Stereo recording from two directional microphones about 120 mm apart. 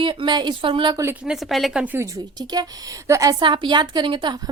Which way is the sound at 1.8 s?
15° right (ahead or behind).